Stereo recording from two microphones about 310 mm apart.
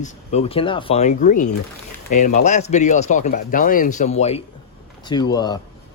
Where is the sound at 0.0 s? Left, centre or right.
Left.